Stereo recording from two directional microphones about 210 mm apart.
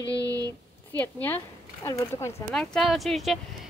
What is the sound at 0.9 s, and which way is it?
Speech, 10° left (ahead or behind).